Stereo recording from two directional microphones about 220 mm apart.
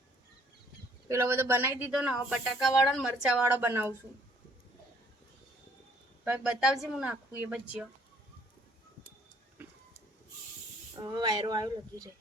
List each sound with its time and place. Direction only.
1.0 s speech: 10° right (ahead or behind)
6.2 s speech: 5° right (ahead or behind)
11.0 s speech: 20° right (ahead or behind)